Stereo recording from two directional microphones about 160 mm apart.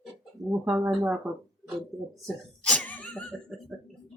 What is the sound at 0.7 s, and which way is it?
Speech, 15° right (ahead or behind).